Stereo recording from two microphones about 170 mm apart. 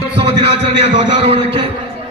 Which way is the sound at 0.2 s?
35° right (ahead or behind).